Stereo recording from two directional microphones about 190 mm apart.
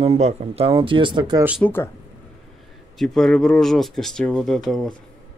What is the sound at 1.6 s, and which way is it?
Speech, 10° left (ahead or behind).